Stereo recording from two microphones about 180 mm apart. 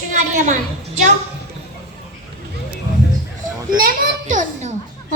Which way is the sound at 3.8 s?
45° right (ahead or behind).